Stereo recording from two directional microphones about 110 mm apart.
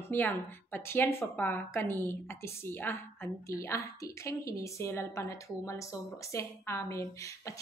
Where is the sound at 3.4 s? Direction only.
30° left (ahead or behind).